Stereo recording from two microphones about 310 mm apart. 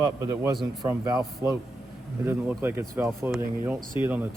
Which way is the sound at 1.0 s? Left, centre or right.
Centre.